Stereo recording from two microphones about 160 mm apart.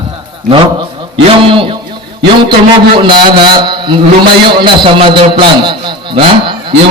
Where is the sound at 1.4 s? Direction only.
35° right (ahead or behind).